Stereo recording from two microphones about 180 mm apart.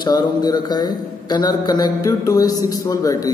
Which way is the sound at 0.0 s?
25° left (ahead or behind).